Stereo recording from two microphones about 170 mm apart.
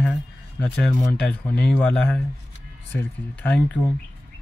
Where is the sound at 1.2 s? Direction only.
10° left (ahead or behind).